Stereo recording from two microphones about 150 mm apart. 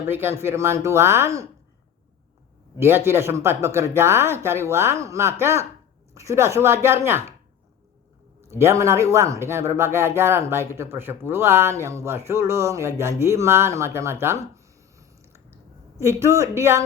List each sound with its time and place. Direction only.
0.0 s speech: 15° right (ahead or behind)
2.7 s speech: 15° right (ahead or behind)
8.4 s speech: 20° right (ahead or behind)